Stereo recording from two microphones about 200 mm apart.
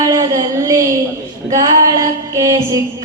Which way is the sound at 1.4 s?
15° right (ahead or behind).